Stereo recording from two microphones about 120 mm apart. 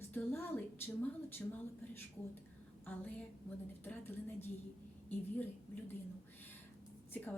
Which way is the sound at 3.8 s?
20° left (ahead or behind).